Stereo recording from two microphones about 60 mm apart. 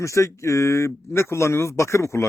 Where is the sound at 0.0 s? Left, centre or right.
Left.